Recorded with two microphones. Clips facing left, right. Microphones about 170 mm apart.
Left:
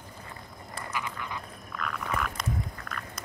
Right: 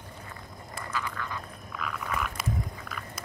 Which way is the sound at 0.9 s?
15° left (ahead or behind).